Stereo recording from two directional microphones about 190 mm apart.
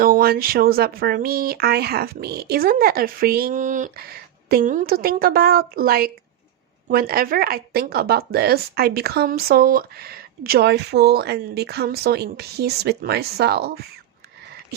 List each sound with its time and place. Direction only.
0.0 s a woman's voice: 50° right (ahead or behind)